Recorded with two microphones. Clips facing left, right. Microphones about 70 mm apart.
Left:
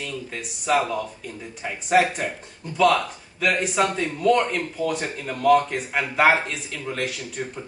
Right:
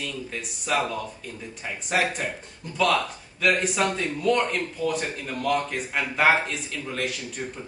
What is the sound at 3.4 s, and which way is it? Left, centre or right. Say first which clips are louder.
Speech: left 1 dB; centre.